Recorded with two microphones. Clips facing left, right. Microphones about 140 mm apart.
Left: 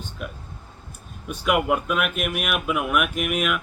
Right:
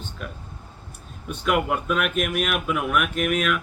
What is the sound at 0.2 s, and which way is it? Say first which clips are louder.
Speech: left 1 dB; 5° left (ahead or behind).